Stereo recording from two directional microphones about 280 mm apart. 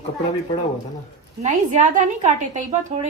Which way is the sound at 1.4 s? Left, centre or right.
Right.